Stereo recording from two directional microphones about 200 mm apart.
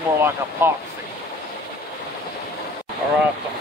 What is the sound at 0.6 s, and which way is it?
Speech, 10° right (ahead or behind).